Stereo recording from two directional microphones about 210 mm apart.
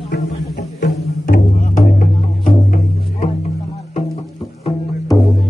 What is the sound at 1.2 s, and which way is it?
Music, 40° left (ahead or behind).